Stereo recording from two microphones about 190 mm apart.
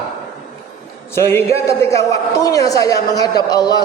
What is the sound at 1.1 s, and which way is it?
A woman's voice, 15° left (ahead or behind).